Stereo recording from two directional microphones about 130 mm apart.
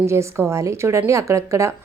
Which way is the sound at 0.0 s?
20° right (ahead or behind).